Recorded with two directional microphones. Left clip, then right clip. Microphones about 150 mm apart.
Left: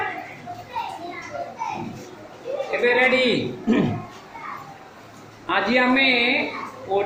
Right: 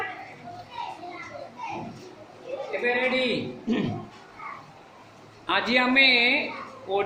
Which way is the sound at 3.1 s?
60° left (ahead or behind).